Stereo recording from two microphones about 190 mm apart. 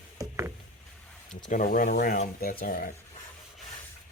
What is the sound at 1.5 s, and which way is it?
Speech, 45° left (ahead or behind).